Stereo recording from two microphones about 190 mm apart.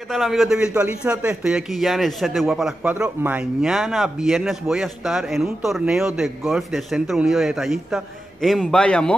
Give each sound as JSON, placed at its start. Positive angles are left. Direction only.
{"t": 0.1, "sound": "a man's voice", "side_deg": 0}